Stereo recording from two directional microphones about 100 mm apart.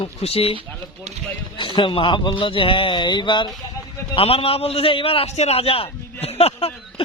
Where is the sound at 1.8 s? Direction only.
55° left (ahead or behind).